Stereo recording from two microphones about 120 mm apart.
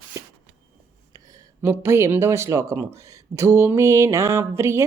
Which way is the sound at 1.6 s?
20° right (ahead or behind).